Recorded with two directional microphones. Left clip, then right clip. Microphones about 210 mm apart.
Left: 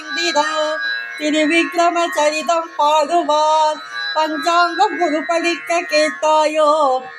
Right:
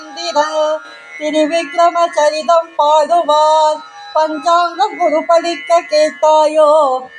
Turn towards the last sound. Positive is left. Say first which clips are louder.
# right 4 dB
turn(degrees=5)  # may be behind; listen again after turning